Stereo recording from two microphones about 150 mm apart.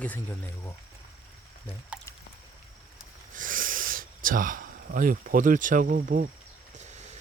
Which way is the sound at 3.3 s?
65° right (ahead or behind).